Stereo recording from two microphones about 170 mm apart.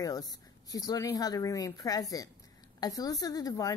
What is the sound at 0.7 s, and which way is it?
Speech, 20° left (ahead or behind).